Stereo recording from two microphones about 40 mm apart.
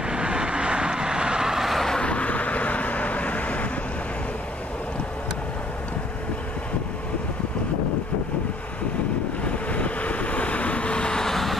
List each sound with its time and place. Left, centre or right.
0.0 s vehicle: right
2.0 s vehicle: left
9.4 s vehicle: left; by 11.5 s centre